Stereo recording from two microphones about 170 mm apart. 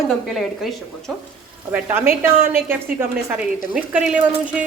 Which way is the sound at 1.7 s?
10° right (ahead or behind).